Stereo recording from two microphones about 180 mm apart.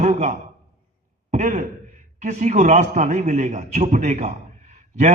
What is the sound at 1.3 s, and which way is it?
A man's voice, 40° right (ahead or behind).